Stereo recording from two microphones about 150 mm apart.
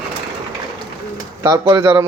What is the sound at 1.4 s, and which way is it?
Speech, 20° right (ahead or behind).